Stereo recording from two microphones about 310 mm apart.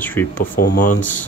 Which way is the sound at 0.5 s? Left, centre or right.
Left.